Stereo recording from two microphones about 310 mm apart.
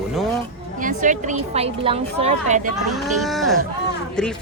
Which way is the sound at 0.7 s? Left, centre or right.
Right.